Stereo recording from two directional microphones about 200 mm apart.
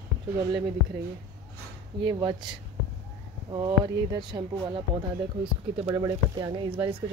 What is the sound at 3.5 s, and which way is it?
Speech, 20° right (ahead or behind).